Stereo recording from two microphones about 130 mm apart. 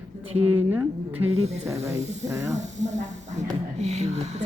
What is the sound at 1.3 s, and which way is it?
Speech, 55° right (ahead or behind).